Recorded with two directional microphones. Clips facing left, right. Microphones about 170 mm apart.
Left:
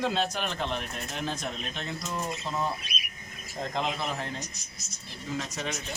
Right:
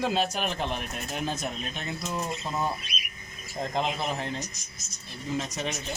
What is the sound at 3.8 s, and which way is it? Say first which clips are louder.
Speech: right 2 dB; 20° right (ahead or behind).